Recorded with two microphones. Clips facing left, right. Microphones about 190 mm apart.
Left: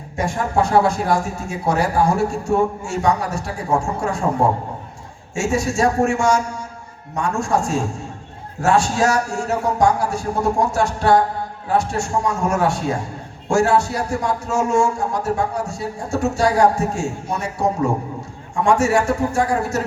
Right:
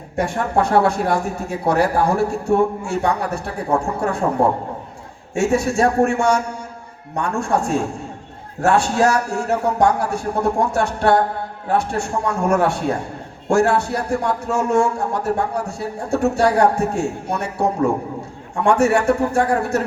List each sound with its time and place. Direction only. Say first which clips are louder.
0.2 s a man's voice: right 1 dB; 60° right (ahead or behind)